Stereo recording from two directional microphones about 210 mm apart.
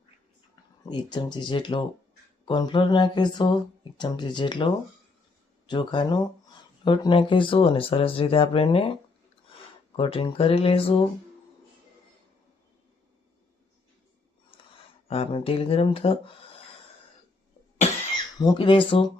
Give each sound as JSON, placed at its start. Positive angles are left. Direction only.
{"t": 0.9, "sound": "speech", "side_deg": 20}
{"t": 10.0, "sound": "speech", "side_deg": 25}
{"t": 15.0, "sound": "speech", "side_deg": 25}
{"t": 18.3, "sound": "speech", "side_deg": 20}